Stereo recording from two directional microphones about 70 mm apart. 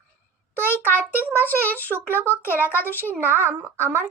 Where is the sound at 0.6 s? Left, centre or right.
Right.